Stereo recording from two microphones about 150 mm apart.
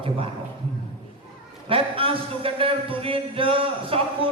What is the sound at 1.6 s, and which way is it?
A man's voice, 35° right (ahead or behind).